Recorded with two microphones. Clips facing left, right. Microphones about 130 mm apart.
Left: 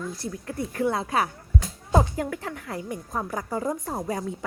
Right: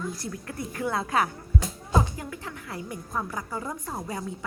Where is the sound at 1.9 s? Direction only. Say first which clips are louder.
Left 4 dB; 50° left (ahead or behind).